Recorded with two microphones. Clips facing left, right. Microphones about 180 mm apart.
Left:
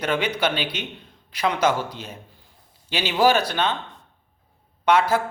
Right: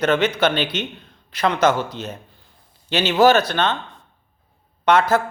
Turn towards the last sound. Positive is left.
turn(degrees=10)  # may be behind; listen again after turning